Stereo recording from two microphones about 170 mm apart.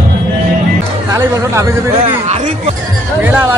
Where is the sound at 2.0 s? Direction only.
40° right (ahead or behind).